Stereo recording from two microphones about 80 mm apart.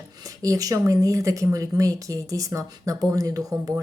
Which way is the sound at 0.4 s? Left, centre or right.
Right.